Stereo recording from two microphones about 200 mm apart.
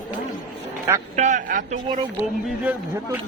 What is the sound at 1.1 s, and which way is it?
Speech, 35° right (ahead or behind).